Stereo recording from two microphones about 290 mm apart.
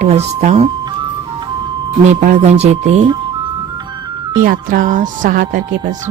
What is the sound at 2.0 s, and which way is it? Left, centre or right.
Speech, right.